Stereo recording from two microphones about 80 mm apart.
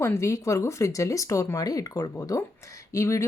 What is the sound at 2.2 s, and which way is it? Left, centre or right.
Speech, left.